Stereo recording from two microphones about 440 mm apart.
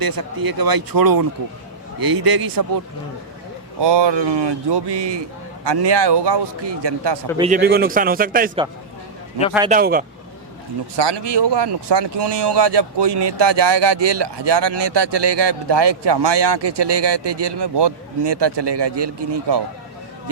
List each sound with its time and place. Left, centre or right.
0.0 s speech: right
3.8 s speech: right
7.3 s a man's voice: centre
9.6 s a man's voice: centre
10.9 s speech: right